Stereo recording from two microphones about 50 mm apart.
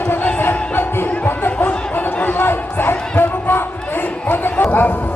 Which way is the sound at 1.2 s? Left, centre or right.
Left.